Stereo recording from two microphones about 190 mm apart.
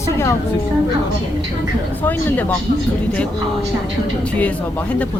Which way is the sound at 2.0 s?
10° left (ahead or behind).